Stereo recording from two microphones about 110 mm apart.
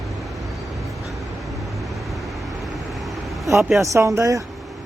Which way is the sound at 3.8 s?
30° right (ahead or behind).